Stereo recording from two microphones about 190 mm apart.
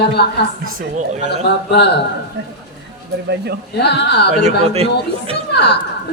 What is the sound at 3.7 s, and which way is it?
Speech, 60° left (ahead or behind).